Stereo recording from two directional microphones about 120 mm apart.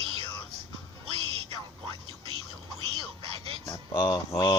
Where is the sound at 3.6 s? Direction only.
35° left (ahead or behind).